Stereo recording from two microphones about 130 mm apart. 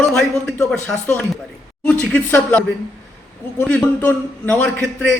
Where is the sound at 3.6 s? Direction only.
10° left (ahead or behind).